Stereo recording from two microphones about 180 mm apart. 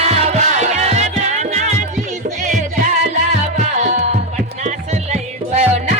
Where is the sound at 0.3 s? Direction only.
35° right (ahead or behind).